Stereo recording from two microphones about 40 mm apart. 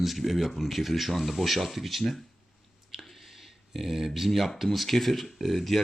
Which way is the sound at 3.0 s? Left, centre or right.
Centre.